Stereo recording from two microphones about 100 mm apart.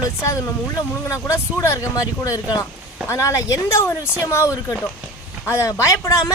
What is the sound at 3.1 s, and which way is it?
Speech, 30° left (ahead or behind).